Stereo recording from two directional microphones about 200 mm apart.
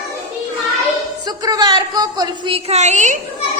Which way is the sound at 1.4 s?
20° right (ahead or behind).